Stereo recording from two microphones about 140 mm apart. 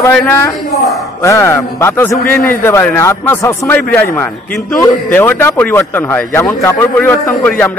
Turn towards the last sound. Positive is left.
turn(degrees=10)  # may be behind; listen again after turning